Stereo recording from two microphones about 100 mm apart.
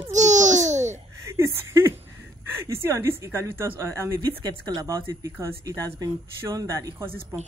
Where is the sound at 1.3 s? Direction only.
25° right (ahead or behind).